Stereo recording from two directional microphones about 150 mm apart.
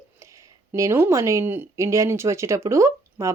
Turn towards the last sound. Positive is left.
turn(degrees=-20)  # may be behind; listen again after turning